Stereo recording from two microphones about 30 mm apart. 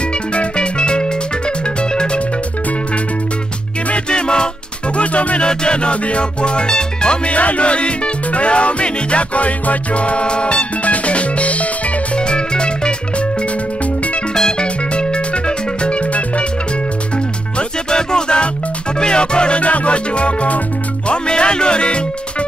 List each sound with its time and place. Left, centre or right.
0.3 s music: left
4.1 s music: left
4.9 s music: left
5.4 s music: left
7.2 s music: left
12.2 s music: left
14.6 s music: left
17.6 s music: left
19.6 s music: left